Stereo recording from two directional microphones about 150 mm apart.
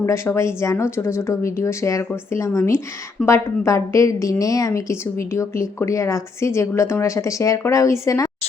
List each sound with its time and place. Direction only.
0.0 s a woman's voice: 15° left (ahead or behind)